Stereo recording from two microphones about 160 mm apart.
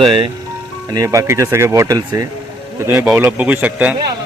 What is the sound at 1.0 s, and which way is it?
Speech, 20° right (ahead or behind).